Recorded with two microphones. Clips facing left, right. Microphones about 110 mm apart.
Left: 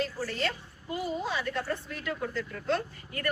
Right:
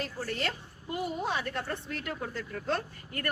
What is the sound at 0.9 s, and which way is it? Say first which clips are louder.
A woman's voice: even; 55° right (ahead or behind).